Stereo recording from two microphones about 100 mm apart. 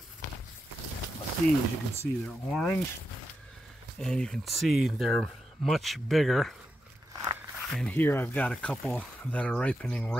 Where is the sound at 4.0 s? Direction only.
10° left (ahead or behind).